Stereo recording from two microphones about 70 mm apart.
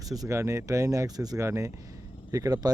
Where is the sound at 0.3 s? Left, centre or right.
Right.